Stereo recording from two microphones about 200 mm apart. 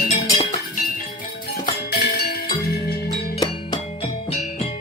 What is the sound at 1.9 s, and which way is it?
Music, 50° left (ahead or behind).